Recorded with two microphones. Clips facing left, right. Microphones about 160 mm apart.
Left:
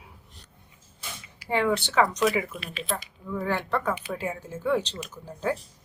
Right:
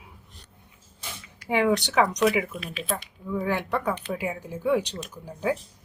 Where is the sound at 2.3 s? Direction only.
Centre (ahead or behind).